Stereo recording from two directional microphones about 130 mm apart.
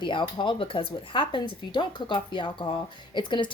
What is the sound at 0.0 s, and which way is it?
A woman's voice, 40° left (ahead or behind).